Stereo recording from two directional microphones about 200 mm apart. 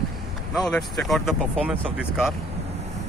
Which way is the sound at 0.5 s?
Centre (ahead or behind).